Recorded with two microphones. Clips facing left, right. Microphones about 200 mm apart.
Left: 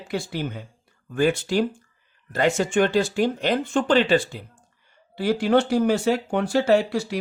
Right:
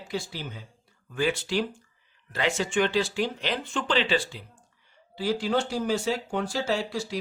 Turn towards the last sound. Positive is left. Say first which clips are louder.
# left 9 dB
turn(degrees=60)  # may be behind; listen again after turning